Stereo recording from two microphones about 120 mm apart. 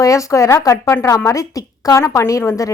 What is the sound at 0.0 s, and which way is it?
A woman's voice, 25° left (ahead or behind).